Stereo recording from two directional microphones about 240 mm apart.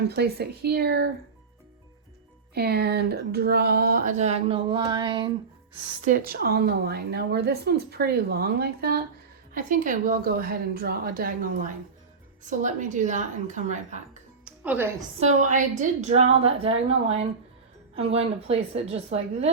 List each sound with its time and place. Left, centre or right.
0.0 s a woman's voice: right
2.6 s a woman's voice: right; by 5.3 s centre
6.1 s a woman's voice: right
14.4 s music: centre
15.2 s a woman's voice: right